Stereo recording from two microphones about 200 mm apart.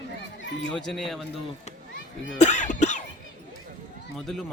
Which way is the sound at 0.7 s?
Centre (ahead or behind).